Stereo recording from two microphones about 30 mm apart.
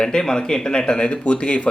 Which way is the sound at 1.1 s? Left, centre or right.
Left.